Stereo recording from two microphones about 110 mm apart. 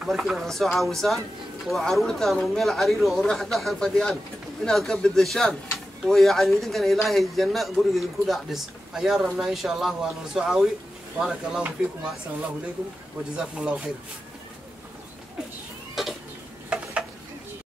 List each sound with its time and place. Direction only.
0.0 s a man's voice: centre (ahead or behind)
15.9 s a sound: centre (ahead or behind)
16.6 s stir: 10° right (ahead or behind)